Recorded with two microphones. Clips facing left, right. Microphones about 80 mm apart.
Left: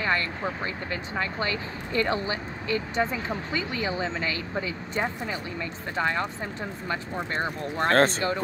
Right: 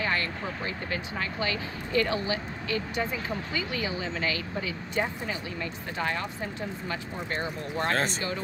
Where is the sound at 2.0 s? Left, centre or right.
Left.